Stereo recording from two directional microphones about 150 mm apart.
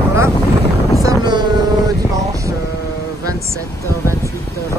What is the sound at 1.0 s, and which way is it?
Vehicle, 25° right (ahead or behind).